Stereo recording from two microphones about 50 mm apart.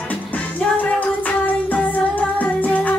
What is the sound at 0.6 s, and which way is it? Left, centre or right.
Music, left.